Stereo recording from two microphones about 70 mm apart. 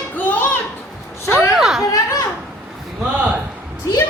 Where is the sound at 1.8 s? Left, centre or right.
Left.